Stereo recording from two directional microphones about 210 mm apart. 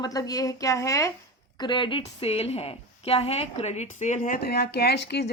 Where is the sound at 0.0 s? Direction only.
15° left (ahead or behind).